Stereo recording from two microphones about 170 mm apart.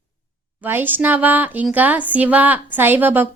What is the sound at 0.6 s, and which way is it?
A woman's voice, 10° right (ahead or behind).